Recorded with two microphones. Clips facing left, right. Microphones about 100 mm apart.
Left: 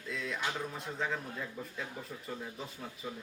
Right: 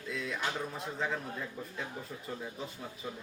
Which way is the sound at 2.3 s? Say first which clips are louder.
Right 2 dB; centre (ahead or behind).